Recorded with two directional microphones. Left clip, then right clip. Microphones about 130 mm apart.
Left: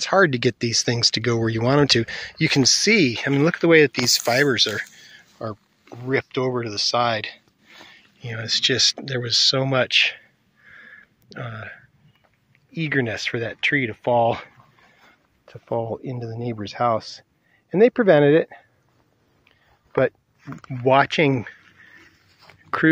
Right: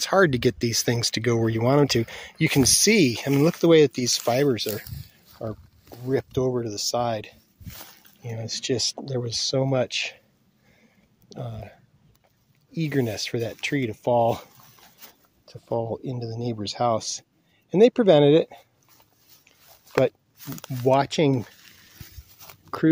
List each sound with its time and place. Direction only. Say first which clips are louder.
0.0 s speech: left 2 dB; 5° right (ahead or behind)
5.5 s a sound: left 3 dB; 10° left (ahead or behind)
6.1 s speech: left 2 dB; 20° right (ahead or behind)
10.7 s a sound: left 17 dB; 15° right (ahead or behind)
12.7 s speech: left 3 dB; 15° right (ahead or behind)
19.9 s speech: left 1 dB; 15° right (ahead or behind)
22.7 s speech: left 5 dB; 5° right (ahead or behind)